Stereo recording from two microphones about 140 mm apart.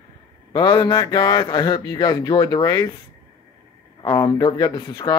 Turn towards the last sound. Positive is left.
turn(degrees=25)  # may be behind; listen again after turning